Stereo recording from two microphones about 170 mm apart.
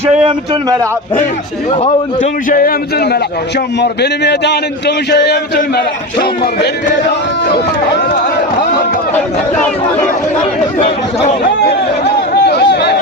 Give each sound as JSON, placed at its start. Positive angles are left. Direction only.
{"t": 1.7, "sound": "a man's voice", "side_deg": 35}
{"t": 2.5, "sound": "speech", "side_deg": 60}
{"t": 3.8, "sound": "a man's voice", "side_deg": 80}
{"t": 12.5, "sound": "a sound", "side_deg": 75}